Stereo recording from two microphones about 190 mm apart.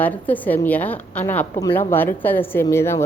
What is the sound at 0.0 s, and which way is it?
A woman's voice, 10° left (ahead or behind).